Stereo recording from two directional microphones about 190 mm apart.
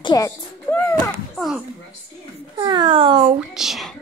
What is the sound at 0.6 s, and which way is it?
Speech, 10° left (ahead or behind).